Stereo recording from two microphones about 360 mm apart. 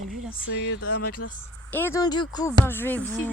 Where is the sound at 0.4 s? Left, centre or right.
Left.